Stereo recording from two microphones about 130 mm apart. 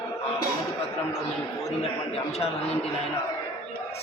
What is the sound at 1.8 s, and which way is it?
Speech, 50° left (ahead or behind).